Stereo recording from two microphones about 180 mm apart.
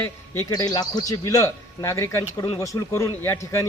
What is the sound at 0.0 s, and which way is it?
A man's voice, 15° left (ahead or behind).